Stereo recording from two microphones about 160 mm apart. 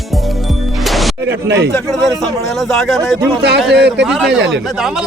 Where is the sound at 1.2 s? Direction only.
90° right.